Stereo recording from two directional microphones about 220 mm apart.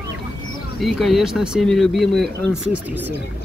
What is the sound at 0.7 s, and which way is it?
Speech, centre (ahead or behind).